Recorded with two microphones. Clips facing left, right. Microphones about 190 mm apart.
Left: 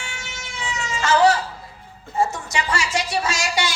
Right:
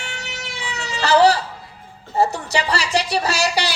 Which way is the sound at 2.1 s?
35° right (ahead or behind).